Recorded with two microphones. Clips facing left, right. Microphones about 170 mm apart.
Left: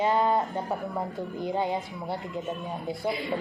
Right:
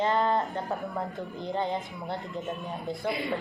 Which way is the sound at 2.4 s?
Centre (ahead or behind).